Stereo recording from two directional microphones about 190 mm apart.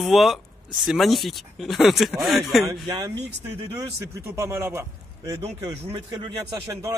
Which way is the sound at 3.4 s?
15° right (ahead or behind).